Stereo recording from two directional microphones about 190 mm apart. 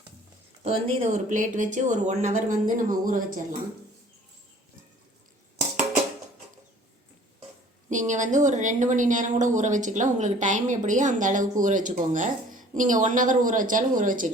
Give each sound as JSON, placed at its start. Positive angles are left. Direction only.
{"t": 0.6, "sound": "speech", "side_deg": -35}
{"t": 7.9, "sound": "speech", "side_deg": -40}